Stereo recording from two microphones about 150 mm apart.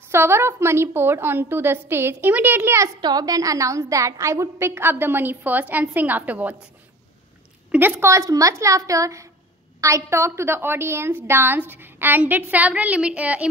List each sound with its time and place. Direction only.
0.1 s a woman's voice: 15° right (ahead or behind)
3.0 s a woman's voice: 25° right (ahead or behind); by 6.5 s 10° right (ahead or behind)
7.7 s a woman's voice: 15° right (ahead or behind)